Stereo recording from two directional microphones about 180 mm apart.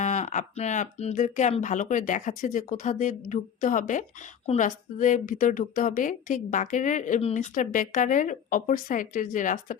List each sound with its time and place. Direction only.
0.0 s a woman's voice: 40° left (ahead or behind)